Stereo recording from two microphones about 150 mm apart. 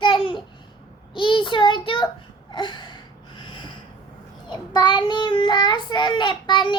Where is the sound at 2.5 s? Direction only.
30° left (ahead or behind).